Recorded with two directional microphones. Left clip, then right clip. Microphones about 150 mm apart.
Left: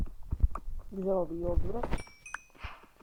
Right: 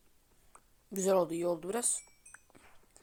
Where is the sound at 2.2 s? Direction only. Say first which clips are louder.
Left 14 dB; 55° left (ahead or behind).